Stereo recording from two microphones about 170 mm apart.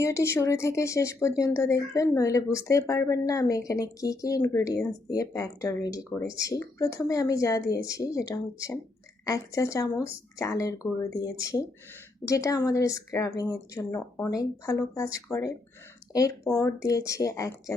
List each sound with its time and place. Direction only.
0.0 s speech: 15° left (ahead or behind)